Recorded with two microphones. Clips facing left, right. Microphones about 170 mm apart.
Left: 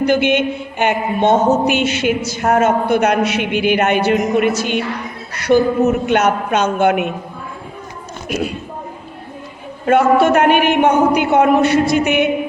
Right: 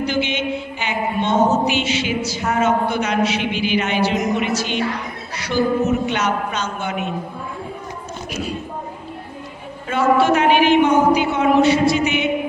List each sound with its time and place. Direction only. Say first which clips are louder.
0.0 s speech: left 7 dB; 55° left (ahead or behind)
8.3 s speech: left 7 dB; 60° left (ahead or behind)
9.8 s speech: left 4 dB; 55° left (ahead or behind)